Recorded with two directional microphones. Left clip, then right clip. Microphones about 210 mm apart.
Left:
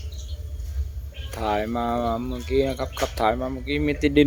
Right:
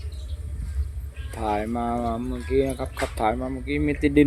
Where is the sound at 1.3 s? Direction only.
Centre (ahead or behind).